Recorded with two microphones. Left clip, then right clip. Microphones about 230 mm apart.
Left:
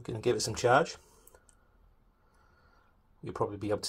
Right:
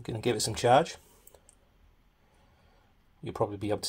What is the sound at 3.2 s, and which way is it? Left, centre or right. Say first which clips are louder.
Speech: right 2 dB; right.